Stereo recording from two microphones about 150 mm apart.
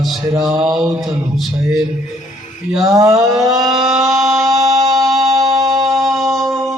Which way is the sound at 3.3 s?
Centre (ahead or behind).